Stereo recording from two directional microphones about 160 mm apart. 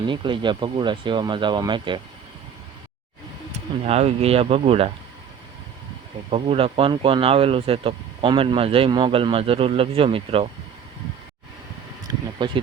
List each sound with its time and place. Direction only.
0.0 s speech: 30° right (ahead or behind)
3.8 s speech: 40° right (ahead or behind)
6.3 s speech: 35° right (ahead or behind)
12.1 s a sound: 25° right (ahead or behind)